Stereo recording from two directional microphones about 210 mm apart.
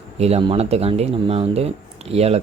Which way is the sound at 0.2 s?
30° right (ahead or behind).